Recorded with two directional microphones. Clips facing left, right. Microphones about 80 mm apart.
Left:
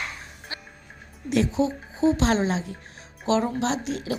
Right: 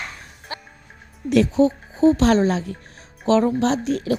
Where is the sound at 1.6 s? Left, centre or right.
Right.